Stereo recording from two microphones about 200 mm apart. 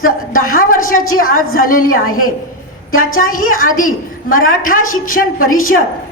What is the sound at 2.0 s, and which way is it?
Speech, 90° left.